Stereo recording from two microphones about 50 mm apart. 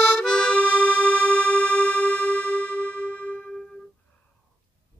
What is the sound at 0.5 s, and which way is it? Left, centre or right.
Music, left.